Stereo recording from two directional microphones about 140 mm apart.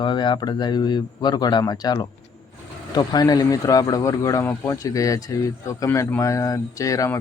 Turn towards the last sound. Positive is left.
turn(degrees=25)  # may be behind; listen again after turning